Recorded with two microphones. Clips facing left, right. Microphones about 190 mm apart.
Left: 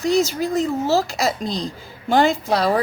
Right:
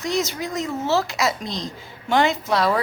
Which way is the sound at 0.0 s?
35° left (ahead or behind).